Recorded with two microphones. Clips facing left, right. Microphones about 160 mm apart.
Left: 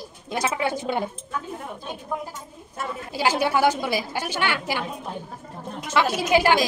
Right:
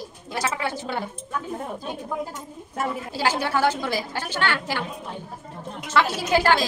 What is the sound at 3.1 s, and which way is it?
A woman's voice, 15° left (ahead or behind).